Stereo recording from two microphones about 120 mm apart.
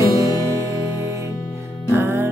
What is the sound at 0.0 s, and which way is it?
Music, 25° right (ahead or behind).